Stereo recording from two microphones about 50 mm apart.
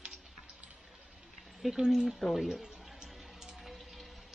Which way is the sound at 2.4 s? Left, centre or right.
Centre.